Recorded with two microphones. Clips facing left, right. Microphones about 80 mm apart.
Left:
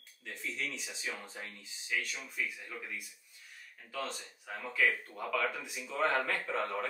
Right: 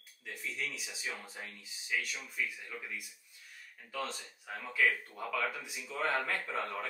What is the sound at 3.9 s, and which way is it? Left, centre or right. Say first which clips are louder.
Speech: even; centre.